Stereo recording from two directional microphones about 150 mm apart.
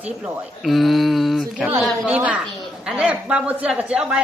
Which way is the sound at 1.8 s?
5° right (ahead or behind).